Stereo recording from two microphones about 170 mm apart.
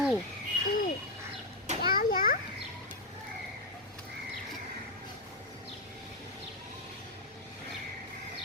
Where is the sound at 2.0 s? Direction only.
55° left (ahead or behind).